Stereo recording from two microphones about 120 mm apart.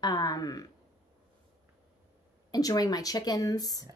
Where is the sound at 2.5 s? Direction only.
30° left (ahead or behind).